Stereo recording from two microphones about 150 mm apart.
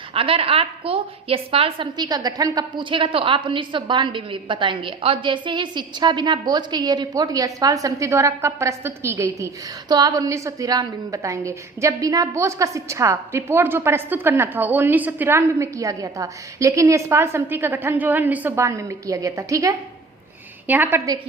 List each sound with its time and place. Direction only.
0.1 s a woman's voice: 40° right (ahead or behind); by 21.0 s 10° right (ahead or behind)